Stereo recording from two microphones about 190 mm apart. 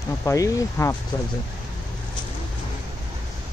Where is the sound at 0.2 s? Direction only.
15° left (ahead or behind).